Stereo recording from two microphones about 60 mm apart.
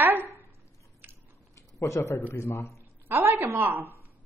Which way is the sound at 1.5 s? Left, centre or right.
Left.